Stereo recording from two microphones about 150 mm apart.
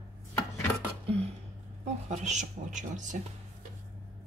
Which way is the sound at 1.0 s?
45° right (ahead or behind).